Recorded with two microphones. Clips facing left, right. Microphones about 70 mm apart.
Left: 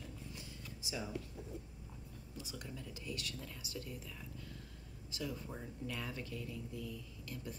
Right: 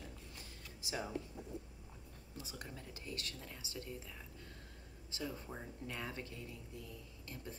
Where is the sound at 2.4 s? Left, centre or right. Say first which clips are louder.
Left 1 dB; right.